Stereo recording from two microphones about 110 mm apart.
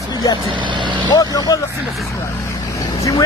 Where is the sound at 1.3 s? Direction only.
35° left (ahead or behind).